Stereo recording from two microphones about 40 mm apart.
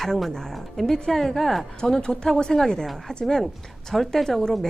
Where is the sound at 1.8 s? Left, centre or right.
Centre.